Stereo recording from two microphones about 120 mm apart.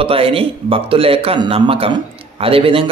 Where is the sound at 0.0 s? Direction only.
50° right (ahead or behind).